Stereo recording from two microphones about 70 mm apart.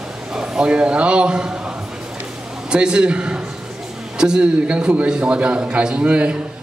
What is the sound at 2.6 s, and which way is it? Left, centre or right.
A man's voice, centre.